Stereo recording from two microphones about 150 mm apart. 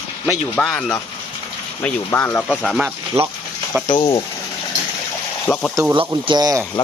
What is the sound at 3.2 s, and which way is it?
Speech, 40° right (ahead or behind).